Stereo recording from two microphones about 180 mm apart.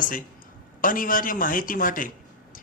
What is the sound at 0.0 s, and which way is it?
A man's voice, 50° left (ahead or behind).